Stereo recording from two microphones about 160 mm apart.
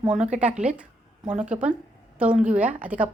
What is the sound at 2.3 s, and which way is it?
Speech, 50° right (ahead or behind).